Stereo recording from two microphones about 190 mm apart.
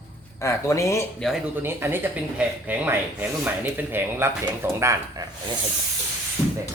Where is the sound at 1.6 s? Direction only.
10° right (ahead or behind).